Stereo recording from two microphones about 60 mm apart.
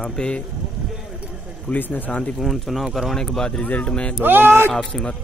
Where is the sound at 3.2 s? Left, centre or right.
Centre.